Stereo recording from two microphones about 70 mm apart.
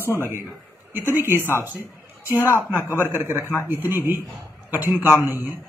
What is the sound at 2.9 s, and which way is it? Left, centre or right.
Speech, right.